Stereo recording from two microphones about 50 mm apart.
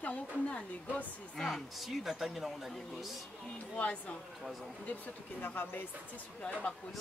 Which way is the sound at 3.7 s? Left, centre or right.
Left.